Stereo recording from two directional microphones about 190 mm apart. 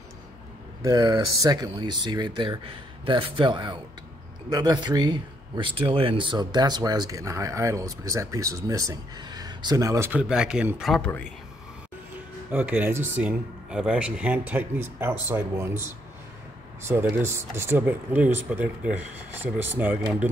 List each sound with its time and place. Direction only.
0.8 s speech: 25° right (ahead or behind); by 11.1 s centre (ahead or behind)
12.4 s speech: 10° right (ahead or behind)